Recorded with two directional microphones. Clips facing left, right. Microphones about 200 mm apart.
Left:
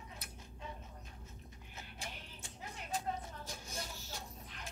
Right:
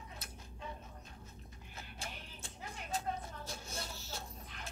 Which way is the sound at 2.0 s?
15° left (ahead or behind).